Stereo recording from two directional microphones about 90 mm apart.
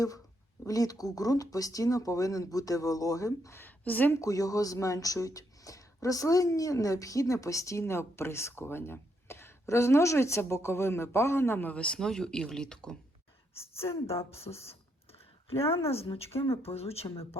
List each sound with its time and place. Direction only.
0.6 s speech: 40° left (ahead or behind)
3.6 s a woman's voice: 20° left (ahead or behind)
4.1 s speech: 40° left (ahead or behind); by 13.0 s 10° left (ahead or behind)
13.6 s a woman's voice: 30° left (ahead or behind)
14.5 s speech: 65° left (ahead or behind)
15.9 s speech: 90° left
17.0 s speech: 65° left (ahead or behind)